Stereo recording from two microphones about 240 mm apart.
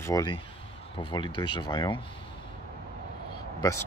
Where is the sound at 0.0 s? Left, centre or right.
Centre.